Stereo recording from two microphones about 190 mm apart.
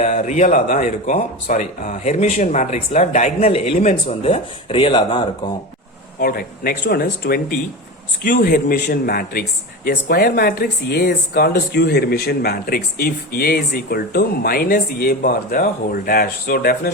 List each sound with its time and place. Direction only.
0.0 s speech: 40° left (ahead or behind)
6.1 s speech: 50° left (ahead or behind)